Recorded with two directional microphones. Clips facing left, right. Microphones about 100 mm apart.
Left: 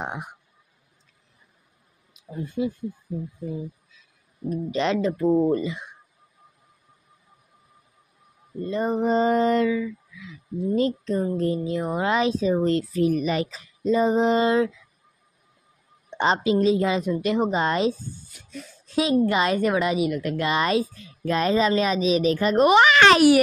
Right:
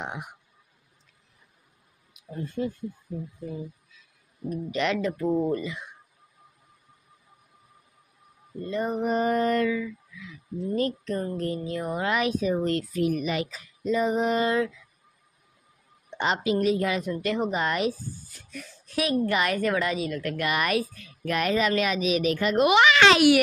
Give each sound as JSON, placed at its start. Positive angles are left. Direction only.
{"t": 0.0, "sound": "speech", "side_deg": 35}
{"t": 2.3, "sound": "speech", "side_deg": 15}
{"t": 4.6, "sound": "a woman's voice", "side_deg": 30}
{"t": 8.6, "sound": "a sound", "side_deg": 25}
{"t": 10.8, "sound": "a woman's voice", "side_deg": 20}
{"t": 16.1, "sound": "a woman's voice", "side_deg": 25}